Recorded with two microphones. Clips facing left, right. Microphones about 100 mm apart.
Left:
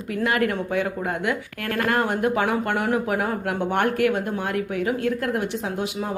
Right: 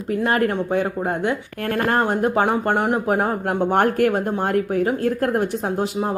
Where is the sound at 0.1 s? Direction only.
35° right (ahead or behind).